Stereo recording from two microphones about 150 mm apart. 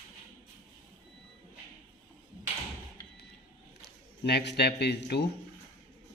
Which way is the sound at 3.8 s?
90° left.